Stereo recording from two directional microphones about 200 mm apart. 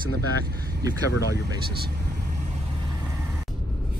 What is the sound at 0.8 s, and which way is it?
Speech, 15° right (ahead or behind).